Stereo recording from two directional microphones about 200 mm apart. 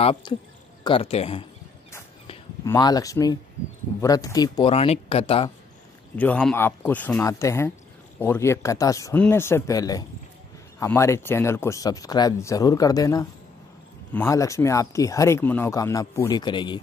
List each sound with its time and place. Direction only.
0.0 s speech: 30° left (ahead or behind)
2.6 s speech: 20° left (ahead or behind)
6.1 s speech: 5° left (ahead or behind); by 16.8 s 25° left (ahead or behind)